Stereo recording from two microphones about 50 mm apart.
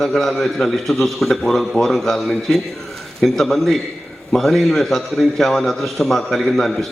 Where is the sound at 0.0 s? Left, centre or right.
Centre.